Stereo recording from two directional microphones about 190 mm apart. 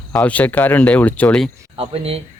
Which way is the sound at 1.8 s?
30° right (ahead or behind).